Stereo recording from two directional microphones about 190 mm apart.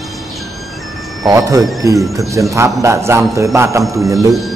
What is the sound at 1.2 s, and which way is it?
A man's voice, 15° right (ahead or behind).